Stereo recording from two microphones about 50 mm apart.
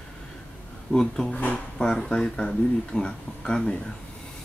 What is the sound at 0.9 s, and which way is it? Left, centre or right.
Speech, centre.